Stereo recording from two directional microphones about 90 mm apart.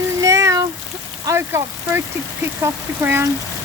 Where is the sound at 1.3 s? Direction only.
25° right (ahead or behind).